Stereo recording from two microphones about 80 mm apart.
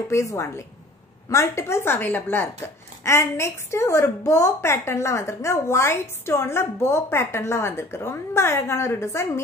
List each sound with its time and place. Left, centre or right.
0.1 s speech: left